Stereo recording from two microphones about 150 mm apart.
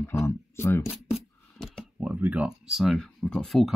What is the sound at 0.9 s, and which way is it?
Coin, centre (ahead or behind).